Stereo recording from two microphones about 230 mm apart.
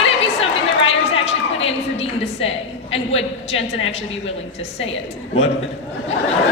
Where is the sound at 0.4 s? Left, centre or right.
Left.